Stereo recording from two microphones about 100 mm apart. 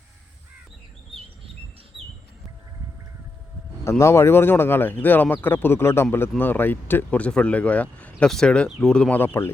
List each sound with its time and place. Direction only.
3.8 s speech: 30° left (ahead or behind)